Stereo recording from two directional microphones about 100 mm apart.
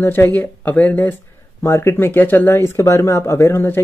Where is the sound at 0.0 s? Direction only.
20° left (ahead or behind).